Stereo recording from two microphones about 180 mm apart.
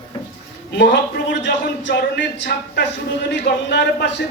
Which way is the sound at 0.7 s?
70° left (ahead or behind).